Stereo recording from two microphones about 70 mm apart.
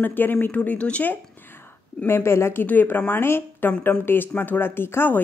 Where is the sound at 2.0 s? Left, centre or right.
Left.